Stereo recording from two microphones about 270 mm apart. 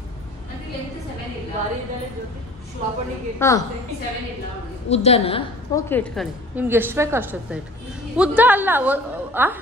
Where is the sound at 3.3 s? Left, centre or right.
Centre.